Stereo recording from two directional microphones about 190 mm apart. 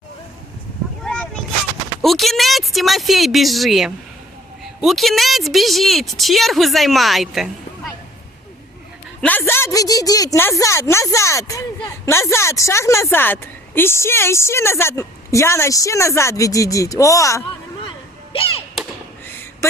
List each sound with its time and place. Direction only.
1.0 s artillery fire: 5° left (ahead or behind)
2.0 s a woman's voice: centre (ahead or behind)
9.2 s a woman's voice: 10° left (ahead or behind)